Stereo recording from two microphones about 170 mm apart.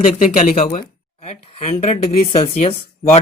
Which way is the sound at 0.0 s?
50° left (ahead or behind).